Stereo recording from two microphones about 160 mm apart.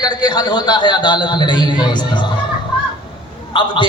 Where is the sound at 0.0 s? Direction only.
25° left (ahead or behind).